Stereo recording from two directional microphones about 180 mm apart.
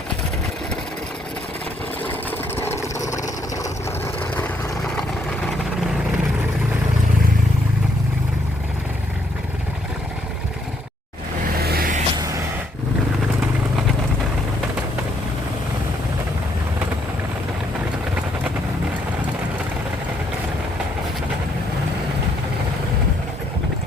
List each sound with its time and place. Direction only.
2.6 s vehicle: 15° left (ahead or behind)
11.6 s vehicle: 55° right (ahead or behind)